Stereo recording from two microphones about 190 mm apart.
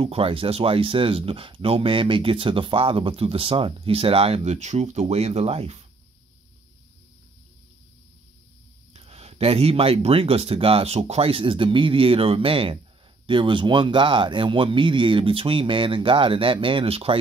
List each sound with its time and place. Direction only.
0.0 s speech: 30° right (ahead or behind)
8.9 s speech: 30° right (ahead or behind)